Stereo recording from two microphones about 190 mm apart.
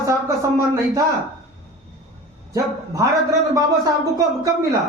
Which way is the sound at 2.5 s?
15° right (ahead or behind).